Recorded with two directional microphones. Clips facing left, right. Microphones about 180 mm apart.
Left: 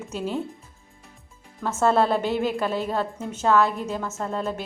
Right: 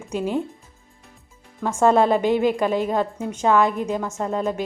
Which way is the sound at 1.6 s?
10° right (ahead or behind).